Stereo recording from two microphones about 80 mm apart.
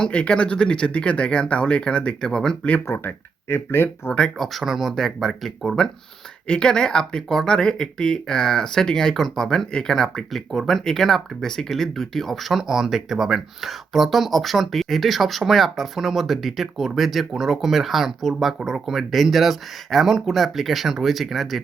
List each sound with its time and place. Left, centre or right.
0.0 s speech: centre
2.8 s speech: left
4.4 s speech: centre